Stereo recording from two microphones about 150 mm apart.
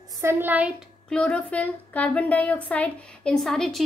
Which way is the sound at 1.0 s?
10° left (ahead or behind).